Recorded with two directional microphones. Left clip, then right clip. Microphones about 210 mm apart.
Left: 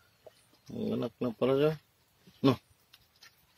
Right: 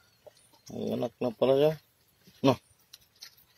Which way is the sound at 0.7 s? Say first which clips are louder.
Right 2 dB; 10° left (ahead or behind).